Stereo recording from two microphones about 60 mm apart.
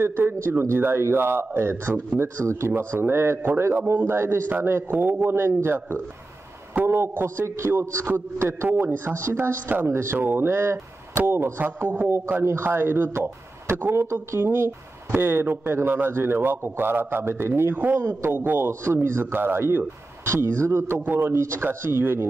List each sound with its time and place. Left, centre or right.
0.0 s speech: right
9.8 s speech: right
10.1 s speech: right
11.9 s speech: right
18.4 s speech: right
18.7 s speech: right
20.2 s speech: right
21.0 s speech: right
21.3 s speech: right